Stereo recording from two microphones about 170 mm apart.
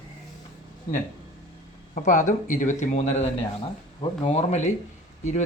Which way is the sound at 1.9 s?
45° left (ahead or behind).